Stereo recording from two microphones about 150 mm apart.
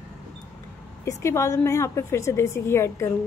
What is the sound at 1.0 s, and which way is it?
A woman's voice, 20° left (ahead or behind).